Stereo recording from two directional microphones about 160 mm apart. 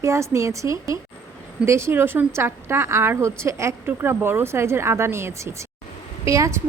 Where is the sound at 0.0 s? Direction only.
20° right (ahead or behind).